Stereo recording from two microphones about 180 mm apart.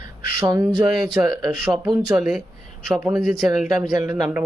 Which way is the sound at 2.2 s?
5° right (ahead or behind).